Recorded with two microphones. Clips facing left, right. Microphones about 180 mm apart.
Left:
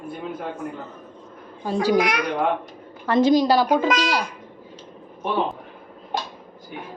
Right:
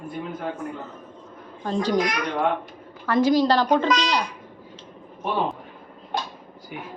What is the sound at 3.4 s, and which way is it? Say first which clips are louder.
Speech: left 1 dB; 10° left (ahead or behind).